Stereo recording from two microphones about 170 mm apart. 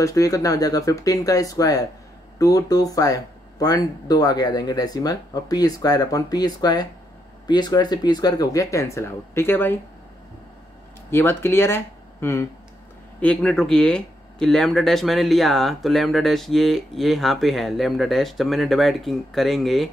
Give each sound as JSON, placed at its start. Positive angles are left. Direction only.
{"t": 0.0, "sound": "speech", "side_deg": 20}
{"t": 11.1, "sound": "speech", "side_deg": 15}